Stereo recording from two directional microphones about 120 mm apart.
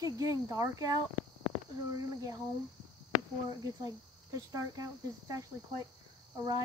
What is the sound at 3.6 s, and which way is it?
Cricket, 30° right (ahead or behind).